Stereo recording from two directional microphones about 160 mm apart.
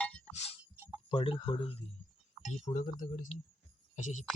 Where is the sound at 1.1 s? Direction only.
35° left (ahead or behind).